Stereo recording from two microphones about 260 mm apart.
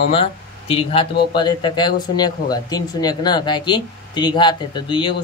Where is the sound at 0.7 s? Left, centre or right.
Left.